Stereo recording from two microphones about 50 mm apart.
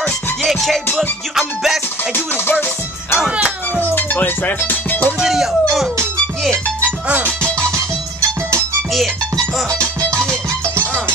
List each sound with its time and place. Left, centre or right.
0.4 s music: centre
3.2 s music: right
3.9 s speech: left
5.2 s speech: centre
9.7 s music: right